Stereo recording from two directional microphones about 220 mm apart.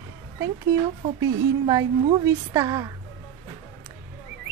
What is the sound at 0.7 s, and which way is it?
A woman's voice, 20° right (ahead or behind).